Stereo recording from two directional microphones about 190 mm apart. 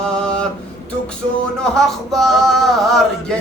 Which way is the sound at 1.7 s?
Centre (ahead or behind).